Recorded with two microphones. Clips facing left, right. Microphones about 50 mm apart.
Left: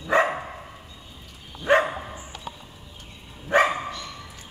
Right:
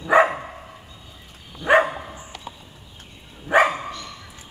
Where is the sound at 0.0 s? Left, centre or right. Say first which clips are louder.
Right 5 dB; centre.